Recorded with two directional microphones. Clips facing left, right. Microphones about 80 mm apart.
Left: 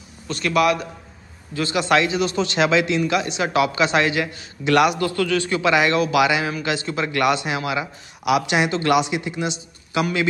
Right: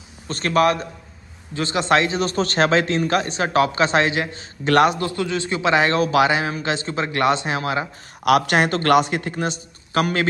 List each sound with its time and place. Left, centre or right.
0.3 s a man's voice: right
8.3 s a man's voice: right